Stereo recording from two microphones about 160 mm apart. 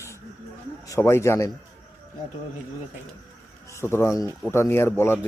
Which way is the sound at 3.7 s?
15° left (ahead or behind).